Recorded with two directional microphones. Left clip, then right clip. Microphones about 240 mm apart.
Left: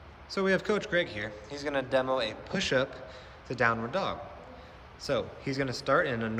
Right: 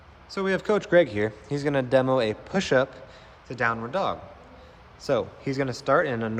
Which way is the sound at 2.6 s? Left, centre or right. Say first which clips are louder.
Right 5 dB; centre.